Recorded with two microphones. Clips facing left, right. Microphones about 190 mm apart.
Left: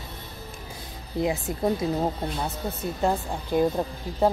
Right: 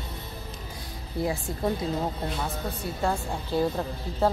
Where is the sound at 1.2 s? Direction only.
20° left (ahead or behind).